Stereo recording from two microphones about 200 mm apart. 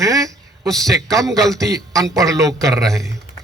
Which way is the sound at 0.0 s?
15° right (ahead or behind).